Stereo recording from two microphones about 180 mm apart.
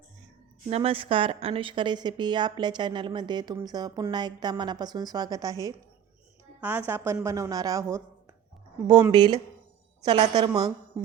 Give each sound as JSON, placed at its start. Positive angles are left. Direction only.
{"t": 0.7, "sound": "a woman's voice", "side_deg": -30}